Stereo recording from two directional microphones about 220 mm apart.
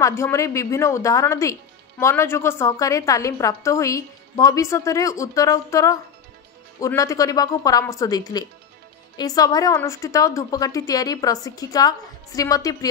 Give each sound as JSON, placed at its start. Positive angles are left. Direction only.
{"t": 0.0, "sound": "speech", "side_deg": 15}